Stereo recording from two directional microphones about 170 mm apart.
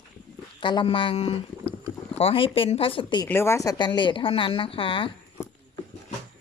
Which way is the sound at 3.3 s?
15° left (ahead or behind).